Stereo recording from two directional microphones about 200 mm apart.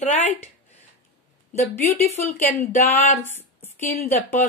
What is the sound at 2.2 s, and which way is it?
A woman's voice, 10° left (ahead or behind).